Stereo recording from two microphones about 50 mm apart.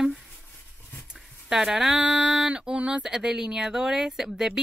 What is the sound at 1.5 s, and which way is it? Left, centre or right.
A woman's voice, centre.